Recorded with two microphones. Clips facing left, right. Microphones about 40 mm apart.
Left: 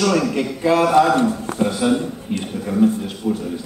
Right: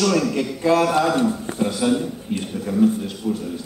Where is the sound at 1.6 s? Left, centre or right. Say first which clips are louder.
Left 2 dB; centre.